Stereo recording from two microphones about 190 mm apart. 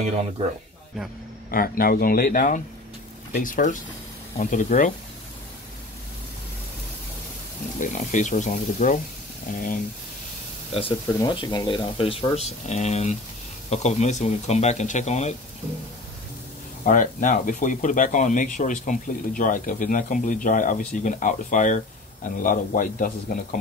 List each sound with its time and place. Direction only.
1.5 s speech: 50° left (ahead or behind)
7.8 s speech: 40° left (ahead or behind)
11.1 s speech: 25° left (ahead or behind)
16.8 s speech: 45° left (ahead or behind)